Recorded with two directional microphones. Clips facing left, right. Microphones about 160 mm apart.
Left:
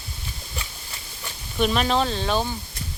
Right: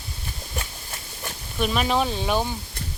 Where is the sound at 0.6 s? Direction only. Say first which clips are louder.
Right 5 dB; 50° right (ahead or behind).